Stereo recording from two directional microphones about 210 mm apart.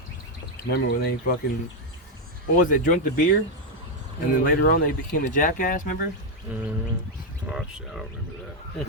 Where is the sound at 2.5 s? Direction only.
40° left (ahead or behind).